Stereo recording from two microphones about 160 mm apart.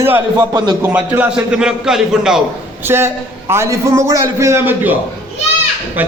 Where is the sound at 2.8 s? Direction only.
15° right (ahead or behind).